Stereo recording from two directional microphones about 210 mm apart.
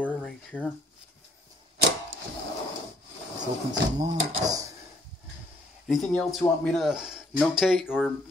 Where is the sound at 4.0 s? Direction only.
20° right (ahead or behind).